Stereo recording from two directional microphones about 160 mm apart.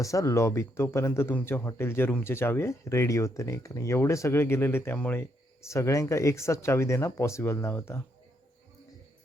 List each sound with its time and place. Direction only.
0.0 s speech: 20° left (ahead or behind)